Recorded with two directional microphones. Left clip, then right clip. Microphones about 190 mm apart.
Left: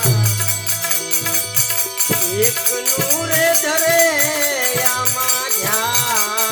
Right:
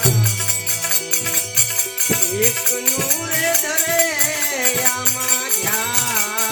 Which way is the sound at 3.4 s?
30° left (ahead or behind).